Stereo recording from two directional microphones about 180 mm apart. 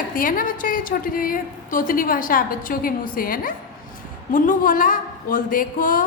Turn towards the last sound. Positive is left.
turn(degrees=50)  # may be behind; listen again after turning